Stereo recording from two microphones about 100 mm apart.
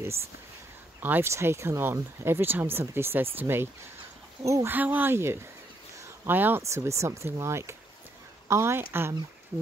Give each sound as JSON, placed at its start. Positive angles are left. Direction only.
{"t": 0.0, "sound": "speech", "side_deg": -25}
{"t": 4.6, "sound": "speech", "side_deg": -15}
{"t": 5.9, "sound": "a sound", "side_deg": -20}
{"t": 6.6, "sound": "speech", "side_deg": -30}